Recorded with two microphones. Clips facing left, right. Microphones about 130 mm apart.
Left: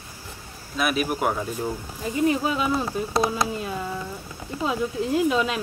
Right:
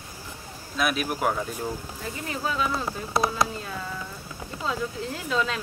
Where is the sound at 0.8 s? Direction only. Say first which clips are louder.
Left 2 dB; centre (ahead or behind).